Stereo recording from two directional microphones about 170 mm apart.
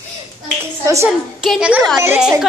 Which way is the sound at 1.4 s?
5° right (ahead or behind).